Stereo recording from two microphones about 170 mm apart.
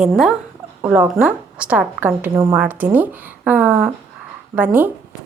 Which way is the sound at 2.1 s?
20° right (ahead or behind).